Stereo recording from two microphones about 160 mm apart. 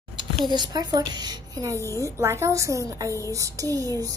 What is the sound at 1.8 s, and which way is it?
Speech, 15° left (ahead or behind).